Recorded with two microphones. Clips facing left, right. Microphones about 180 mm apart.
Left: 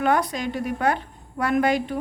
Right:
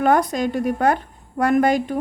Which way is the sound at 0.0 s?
45° right (ahead or behind).